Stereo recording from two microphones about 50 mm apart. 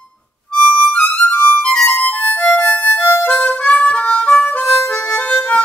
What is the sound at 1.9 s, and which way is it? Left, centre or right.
Music, left.